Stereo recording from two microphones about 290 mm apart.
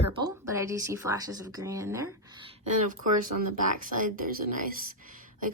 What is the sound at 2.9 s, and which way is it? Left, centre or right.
Speech, right.